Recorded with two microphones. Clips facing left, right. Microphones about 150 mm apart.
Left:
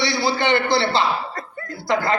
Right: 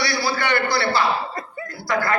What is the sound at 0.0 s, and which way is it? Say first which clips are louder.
A man's voice: left 3 dB; 25° left (ahead or behind).